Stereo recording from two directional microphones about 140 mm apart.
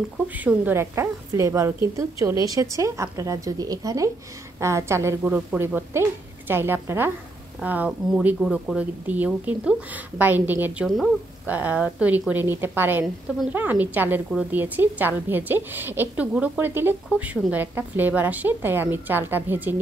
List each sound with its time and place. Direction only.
0.3 s a woman's voice: 10° right (ahead or behind)
13.0 s a woman's voice: centre (ahead or behind)
13.6 s a woman's voice: 10° right (ahead or behind)